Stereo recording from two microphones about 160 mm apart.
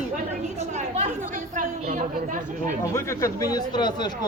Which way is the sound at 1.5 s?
50° right (ahead or behind).